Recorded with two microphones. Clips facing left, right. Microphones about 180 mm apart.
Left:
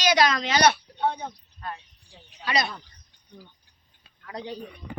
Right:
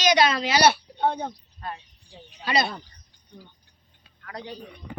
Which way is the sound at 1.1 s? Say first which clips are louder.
Right 4 dB; 30° right (ahead or behind).